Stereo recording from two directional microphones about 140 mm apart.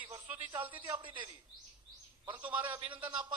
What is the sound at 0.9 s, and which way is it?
Speech, 35° right (ahead or behind).